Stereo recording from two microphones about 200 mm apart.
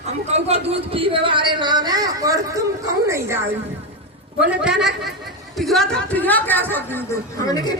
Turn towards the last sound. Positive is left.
turn(degrees=20)  # may be behind; listen again after turning